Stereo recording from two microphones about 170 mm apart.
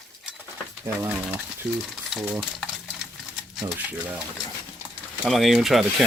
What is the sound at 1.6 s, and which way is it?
Speech, 5° right (ahead or behind).